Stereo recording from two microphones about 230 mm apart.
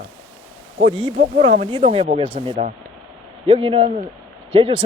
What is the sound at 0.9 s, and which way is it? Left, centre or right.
Speech, right.